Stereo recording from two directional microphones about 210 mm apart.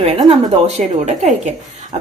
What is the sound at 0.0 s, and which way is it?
Speech, 30° right (ahead or behind).